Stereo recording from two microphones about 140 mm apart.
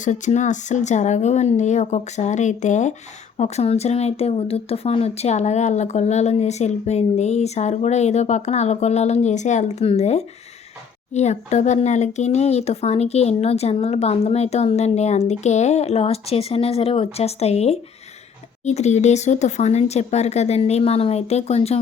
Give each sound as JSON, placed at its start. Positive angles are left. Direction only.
{"t": 0.0, "sound": "speech", "side_deg": 60}